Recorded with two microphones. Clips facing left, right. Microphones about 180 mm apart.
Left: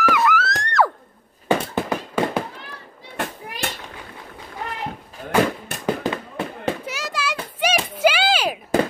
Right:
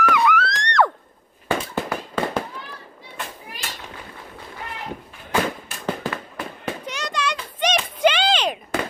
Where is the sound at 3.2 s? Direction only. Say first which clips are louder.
Left 7 dB; 65° left (ahead or behind).